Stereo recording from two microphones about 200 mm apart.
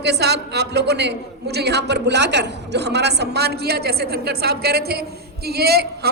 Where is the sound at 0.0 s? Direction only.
55° right (ahead or behind).